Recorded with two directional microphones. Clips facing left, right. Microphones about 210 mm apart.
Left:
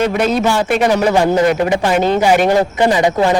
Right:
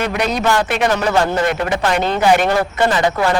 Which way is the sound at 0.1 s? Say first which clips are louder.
Left 3 dB; centre (ahead or behind).